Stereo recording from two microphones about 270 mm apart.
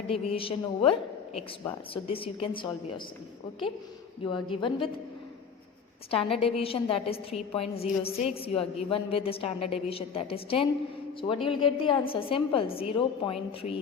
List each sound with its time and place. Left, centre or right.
0.1 s a woman's voice: centre
4.2 s a woman's voice: centre
6.1 s a woman's voice: left